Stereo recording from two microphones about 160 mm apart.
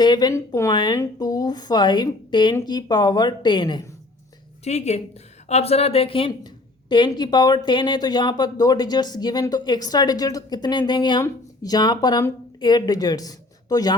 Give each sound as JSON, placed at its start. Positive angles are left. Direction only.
{"t": 0.0, "sound": "a woman's voice", "side_deg": 25}
{"t": 4.6, "sound": "a woman's voice", "side_deg": 45}